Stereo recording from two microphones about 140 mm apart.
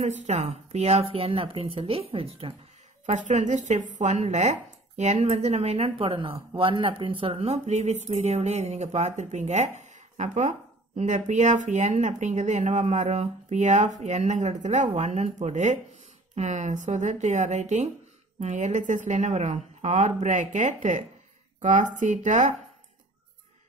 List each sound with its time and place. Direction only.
0.0 s speech: 55° right (ahead or behind)
3.1 s speech: 60° right (ahead or behind)